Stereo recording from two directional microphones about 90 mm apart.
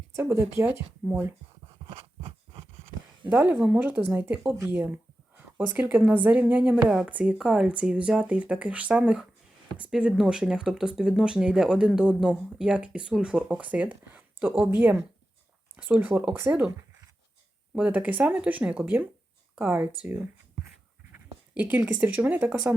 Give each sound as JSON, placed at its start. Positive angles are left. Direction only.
{"t": 0.2, "sound": "speech", "side_deg": -25}
{"t": 1.9, "sound": "a sound", "side_deg": -85}
{"t": 3.2, "sound": "a woman's voice", "side_deg": -20}
{"t": 17.7, "sound": "a woman's voice", "side_deg": -15}
{"t": 21.5, "sound": "speech", "side_deg": -20}